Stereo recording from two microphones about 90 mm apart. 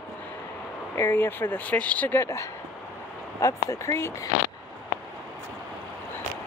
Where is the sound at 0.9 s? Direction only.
25° left (ahead or behind).